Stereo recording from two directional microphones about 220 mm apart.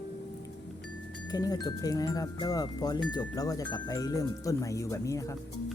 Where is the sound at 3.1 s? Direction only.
15° left (ahead or behind).